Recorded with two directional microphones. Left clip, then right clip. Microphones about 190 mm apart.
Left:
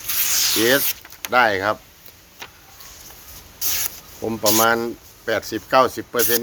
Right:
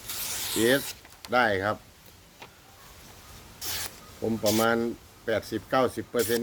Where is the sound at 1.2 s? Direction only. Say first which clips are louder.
Left 7 dB; 15° right (ahead or behind).